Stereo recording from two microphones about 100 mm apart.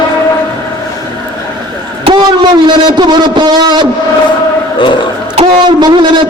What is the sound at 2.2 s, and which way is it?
A man's voice, 45° right (ahead or behind).